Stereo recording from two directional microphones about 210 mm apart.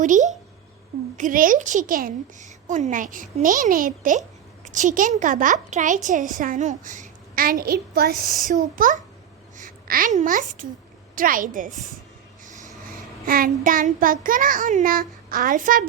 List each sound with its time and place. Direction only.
0.0 s speech: 35° right (ahead or behind)
9.6 s a sound: 40° right (ahead or behind)
11.1 s a woman's voice: 40° right (ahead or behind)
12.5 s vehicle: 35° right (ahead or behind)
13.2 s speech: 40° right (ahead or behind)